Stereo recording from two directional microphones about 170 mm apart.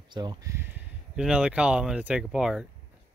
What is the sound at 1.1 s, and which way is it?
Speech, 5° right (ahead or behind).